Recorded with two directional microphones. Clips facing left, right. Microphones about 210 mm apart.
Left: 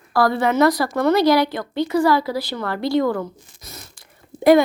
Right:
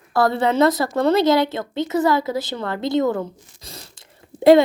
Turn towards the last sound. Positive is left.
turn(degrees=-25)  # may be behind; listen again after turning